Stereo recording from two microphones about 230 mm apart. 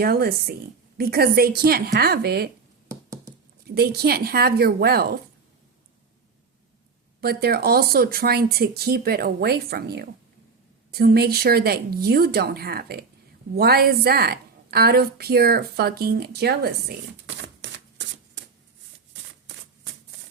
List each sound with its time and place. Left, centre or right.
0.0 s speech: right
2.9 s a sound: centre
3.8 s a woman's voice: right
7.2 s a woman's voice: right
17.2 s shuffling cards: right